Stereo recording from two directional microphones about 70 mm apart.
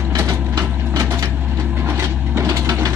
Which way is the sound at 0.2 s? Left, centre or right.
Right.